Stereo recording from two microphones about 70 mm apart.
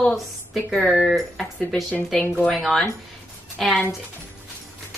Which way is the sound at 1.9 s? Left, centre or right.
Left.